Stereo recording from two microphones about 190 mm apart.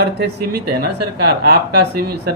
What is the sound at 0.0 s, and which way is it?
Speech, 60° right (ahead or behind).